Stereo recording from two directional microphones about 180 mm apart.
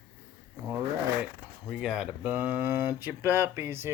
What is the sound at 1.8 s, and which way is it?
Speech, 5° right (ahead or behind).